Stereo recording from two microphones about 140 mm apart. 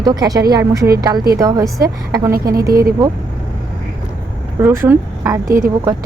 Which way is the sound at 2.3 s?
90° right.